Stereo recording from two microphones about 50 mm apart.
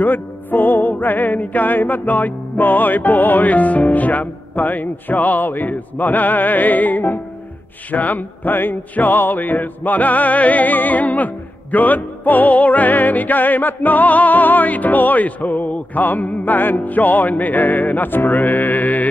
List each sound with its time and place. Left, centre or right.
0.0 s music: left